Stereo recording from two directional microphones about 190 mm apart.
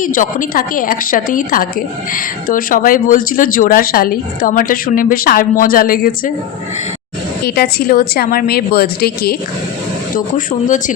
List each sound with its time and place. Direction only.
0.0 s speech: 45° left (ahead or behind)
7.4 s speech: 55° left (ahead or behind)
10.2 s speech: 45° left (ahead or behind)